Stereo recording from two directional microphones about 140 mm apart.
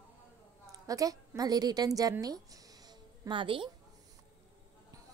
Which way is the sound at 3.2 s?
35° right (ahead or behind).